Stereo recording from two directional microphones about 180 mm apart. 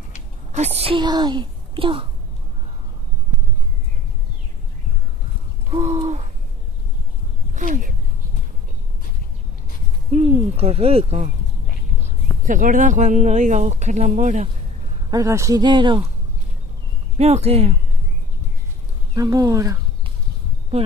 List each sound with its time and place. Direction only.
0.5 s speech: 35° right (ahead or behind)
5.7 s owl: 35° right (ahead or behind)
7.5 s speech: 45° right (ahead or behind)
10.1 s speech: 40° right (ahead or behind)
15.0 s speech: 20° right (ahead or behind)
17.2 s speech: 35° right (ahead or behind)
19.1 s speech: 20° right (ahead or behind)